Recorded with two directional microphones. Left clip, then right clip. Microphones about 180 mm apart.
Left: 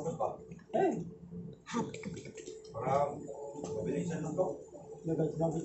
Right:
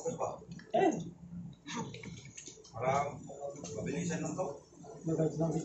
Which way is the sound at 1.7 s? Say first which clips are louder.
Left 5 dB; 65° left (ahead or behind).